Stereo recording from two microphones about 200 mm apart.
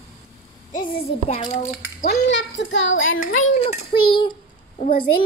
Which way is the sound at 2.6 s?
65° left (ahead or behind).